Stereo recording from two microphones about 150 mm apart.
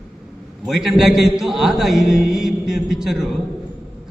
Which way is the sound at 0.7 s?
Centre (ahead or behind).